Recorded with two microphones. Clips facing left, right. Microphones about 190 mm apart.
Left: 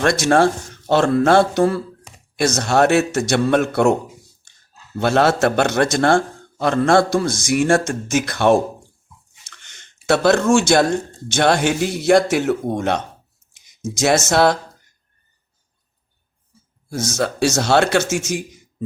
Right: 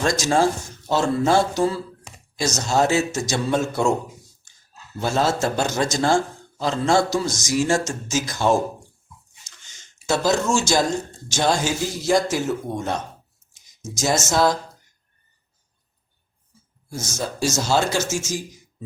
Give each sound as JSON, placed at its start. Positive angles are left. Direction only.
{"t": 0.0, "sound": "a man's voice", "side_deg": 65}
{"t": 4.9, "sound": "a man's voice", "side_deg": 70}
{"t": 16.9, "sound": "speech", "side_deg": 70}